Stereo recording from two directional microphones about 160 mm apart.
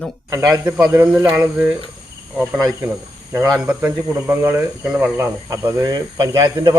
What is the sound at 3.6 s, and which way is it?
Speech, 10° right (ahead or behind).